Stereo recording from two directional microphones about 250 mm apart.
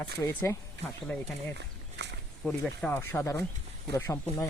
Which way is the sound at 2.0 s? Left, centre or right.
Right.